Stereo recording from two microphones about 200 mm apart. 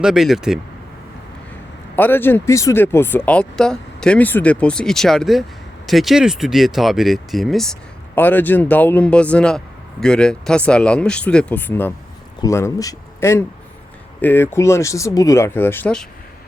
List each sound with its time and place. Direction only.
0.0 s speech: centre (ahead or behind)
2.0 s speech: 10° left (ahead or behind)